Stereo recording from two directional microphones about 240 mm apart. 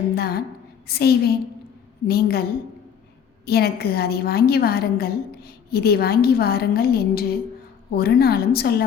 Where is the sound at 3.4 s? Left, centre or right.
Left.